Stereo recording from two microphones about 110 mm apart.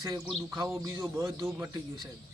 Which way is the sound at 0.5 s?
30° right (ahead or behind).